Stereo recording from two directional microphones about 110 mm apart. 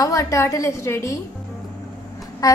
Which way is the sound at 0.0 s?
30° left (ahead or behind).